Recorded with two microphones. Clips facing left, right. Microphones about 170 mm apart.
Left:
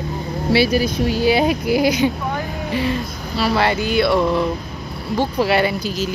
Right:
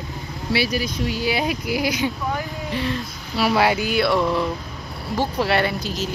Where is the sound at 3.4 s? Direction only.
10° right (ahead or behind).